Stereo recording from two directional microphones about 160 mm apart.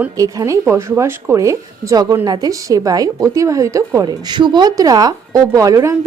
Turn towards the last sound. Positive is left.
turn(degrees=-20)  # may be behind; listen again after turning